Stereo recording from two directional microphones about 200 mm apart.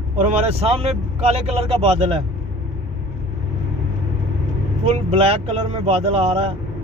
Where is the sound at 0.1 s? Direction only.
35° right (ahead or behind).